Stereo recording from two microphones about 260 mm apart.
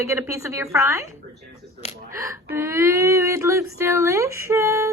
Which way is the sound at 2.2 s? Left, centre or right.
Centre.